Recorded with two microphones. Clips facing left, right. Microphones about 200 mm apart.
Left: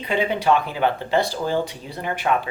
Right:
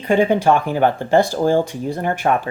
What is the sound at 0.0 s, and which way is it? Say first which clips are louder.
Speech: right 7 dB; 45° right (ahead or behind).